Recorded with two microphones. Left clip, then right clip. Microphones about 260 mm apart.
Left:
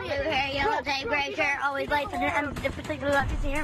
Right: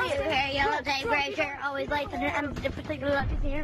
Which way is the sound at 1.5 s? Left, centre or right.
Centre.